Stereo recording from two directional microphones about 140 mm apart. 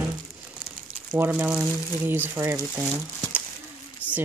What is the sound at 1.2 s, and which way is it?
Speech, 10° right (ahead or behind).